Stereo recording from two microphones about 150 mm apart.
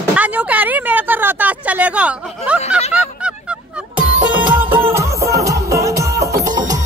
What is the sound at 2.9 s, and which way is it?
Honk, 5° right (ahead or behind).